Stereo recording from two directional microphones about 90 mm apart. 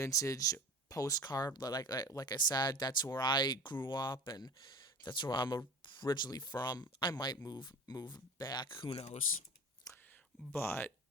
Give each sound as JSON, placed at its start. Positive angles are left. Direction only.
{"t": 0.0, "sound": "speech", "side_deg": 40}
{"t": 9.9, "sound": "whispering", "side_deg": 40}
{"t": 10.5, "sound": "speech", "side_deg": 25}